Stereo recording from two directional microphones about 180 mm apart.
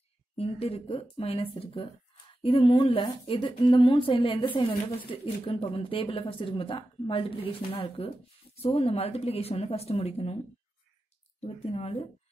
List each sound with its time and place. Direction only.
0.4 s speech: 35° left (ahead or behind)
11.4 s speech: 35° left (ahead or behind)